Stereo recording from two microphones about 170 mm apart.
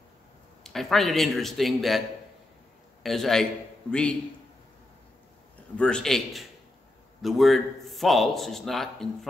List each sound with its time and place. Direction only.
0.7 s a man's voice: centre (ahead or behind)
5.8 s a man's voice: 5° left (ahead or behind)